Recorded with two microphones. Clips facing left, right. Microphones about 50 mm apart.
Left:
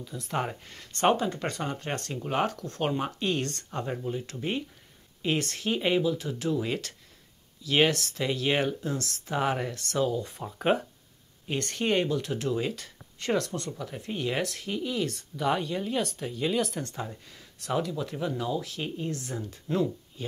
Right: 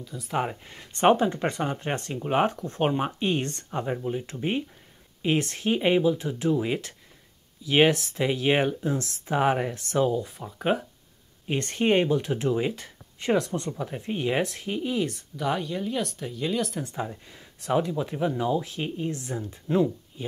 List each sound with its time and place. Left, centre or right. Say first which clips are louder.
0.0 s speech: right 3 dB; centre
10.2 s speech: even; centre
11.4 s speech: right 4 dB; right
15.3 s speech: left 1 dB; centre
16.8 s speech: right 4 dB; centre